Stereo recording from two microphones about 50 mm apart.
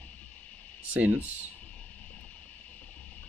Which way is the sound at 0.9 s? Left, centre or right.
Right.